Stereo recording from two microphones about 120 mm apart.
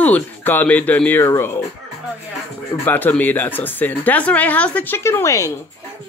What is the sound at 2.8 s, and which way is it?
Speech, 15° left (ahead or behind).